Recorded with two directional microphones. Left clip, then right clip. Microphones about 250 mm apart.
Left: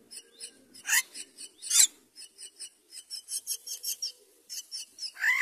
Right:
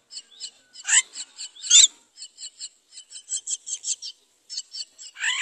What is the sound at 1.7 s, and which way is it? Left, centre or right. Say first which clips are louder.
Filing: right 10 dB; left.